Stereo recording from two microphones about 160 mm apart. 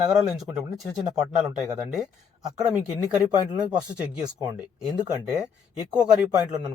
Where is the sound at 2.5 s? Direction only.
5° right (ahead or behind).